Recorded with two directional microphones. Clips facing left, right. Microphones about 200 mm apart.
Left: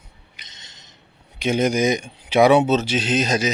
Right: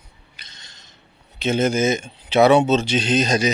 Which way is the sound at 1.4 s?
15° left (ahead or behind).